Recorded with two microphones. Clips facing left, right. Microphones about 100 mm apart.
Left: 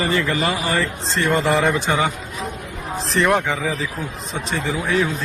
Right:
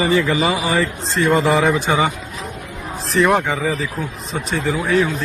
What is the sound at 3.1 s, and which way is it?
Speech, centre (ahead or behind).